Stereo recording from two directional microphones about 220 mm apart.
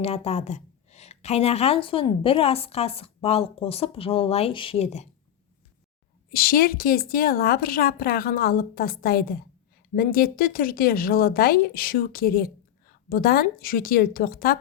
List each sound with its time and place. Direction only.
0.0 s a woman's voice: 25° left (ahead or behind)
6.3 s a woman's voice: 40° left (ahead or behind)